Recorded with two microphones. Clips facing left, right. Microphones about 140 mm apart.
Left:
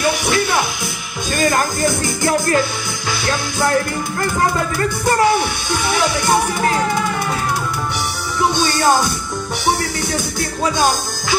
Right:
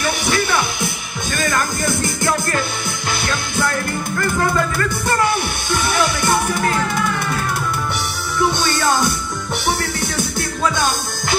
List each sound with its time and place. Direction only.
8.5 s music: 55° right (ahead or behind)